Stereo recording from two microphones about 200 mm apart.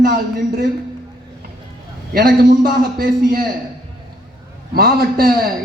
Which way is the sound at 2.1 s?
50° right (ahead or behind).